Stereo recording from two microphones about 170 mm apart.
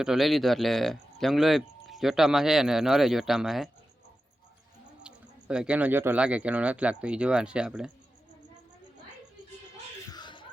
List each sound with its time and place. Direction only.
0.0 s speech: centre (ahead or behind)
5.0 s speech: 5° right (ahead or behind)
10.1 s a sound: 25° left (ahead or behind)